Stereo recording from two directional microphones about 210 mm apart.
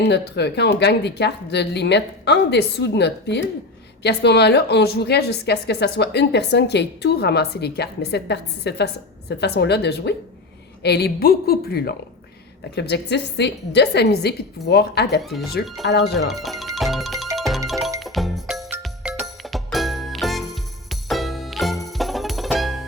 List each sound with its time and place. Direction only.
0.0 s a woman's voice: 55° left (ahead or behind)
15.2 s speech: centre (ahead or behind)
15.9 s a woman's voice: 55° left (ahead or behind)
16.1 s speech: centre (ahead or behind)
17.3 s music: centre (ahead or behind)